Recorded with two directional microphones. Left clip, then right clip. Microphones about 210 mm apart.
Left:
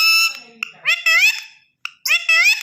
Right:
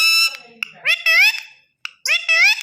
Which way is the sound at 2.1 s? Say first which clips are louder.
Left 1 dB; 25° right (ahead or behind).